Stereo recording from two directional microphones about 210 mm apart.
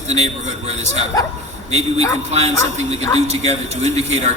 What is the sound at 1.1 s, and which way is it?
Speech, 15° left (ahead or behind).